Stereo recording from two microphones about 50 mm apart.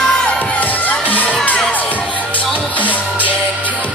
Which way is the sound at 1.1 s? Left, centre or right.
Left.